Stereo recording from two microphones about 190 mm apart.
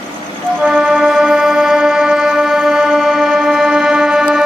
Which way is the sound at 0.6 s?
10° right (ahead or behind).